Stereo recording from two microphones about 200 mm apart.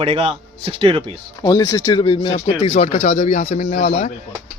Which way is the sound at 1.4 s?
15° left (ahead or behind).